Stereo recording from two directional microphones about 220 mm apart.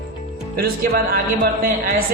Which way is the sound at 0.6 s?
40° right (ahead or behind).